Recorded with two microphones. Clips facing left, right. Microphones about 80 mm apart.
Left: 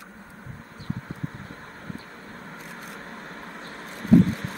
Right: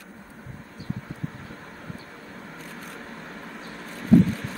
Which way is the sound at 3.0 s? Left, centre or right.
Left.